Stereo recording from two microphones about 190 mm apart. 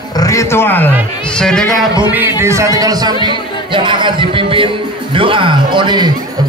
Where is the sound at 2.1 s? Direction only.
10° right (ahead or behind).